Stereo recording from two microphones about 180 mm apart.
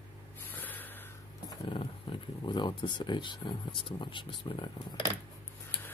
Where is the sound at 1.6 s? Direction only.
30° left (ahead or behind).